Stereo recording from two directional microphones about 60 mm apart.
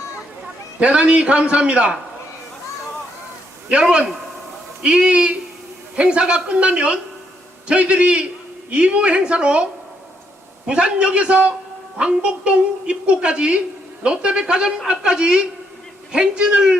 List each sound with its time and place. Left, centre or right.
0.8 s a man's voice: right
3.7 s a woman's voice: centre
10.7 s a woman's voice: centre